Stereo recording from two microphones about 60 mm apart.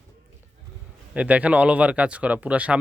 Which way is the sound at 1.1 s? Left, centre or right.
Right.